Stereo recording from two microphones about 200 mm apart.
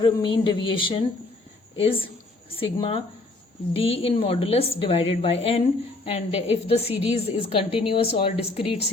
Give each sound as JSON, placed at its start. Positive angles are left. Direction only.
{"t": 0.0, "sound": "a woman's voice", "side_deg": 25}